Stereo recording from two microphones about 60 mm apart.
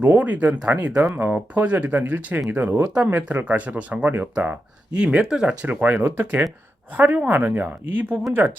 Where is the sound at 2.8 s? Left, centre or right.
Centre.